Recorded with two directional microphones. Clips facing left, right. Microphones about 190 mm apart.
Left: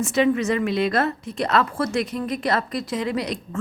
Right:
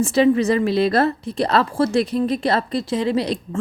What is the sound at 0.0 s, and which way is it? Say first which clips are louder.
A woman's voice: right 4 dB; 35° right (ahead or behind).